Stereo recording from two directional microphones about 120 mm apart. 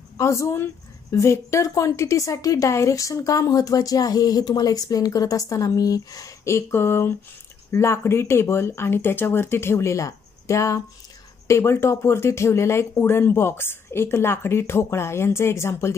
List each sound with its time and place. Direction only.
0.2 s speech: 25° left (ahead or behind)